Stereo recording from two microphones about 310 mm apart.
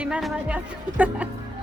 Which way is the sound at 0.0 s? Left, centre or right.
Centre.